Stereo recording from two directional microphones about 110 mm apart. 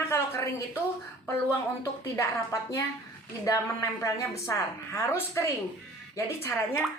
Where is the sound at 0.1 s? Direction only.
25° left (ahead or behind).